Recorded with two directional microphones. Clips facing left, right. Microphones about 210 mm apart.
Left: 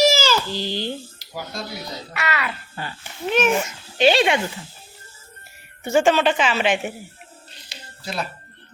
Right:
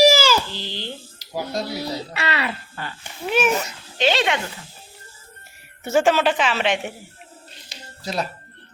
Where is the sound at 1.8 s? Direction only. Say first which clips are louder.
Right 3 dB; 30° right (ahead or behind).